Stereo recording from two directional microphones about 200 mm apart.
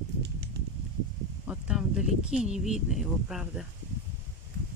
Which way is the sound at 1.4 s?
5° right (ahead or behind).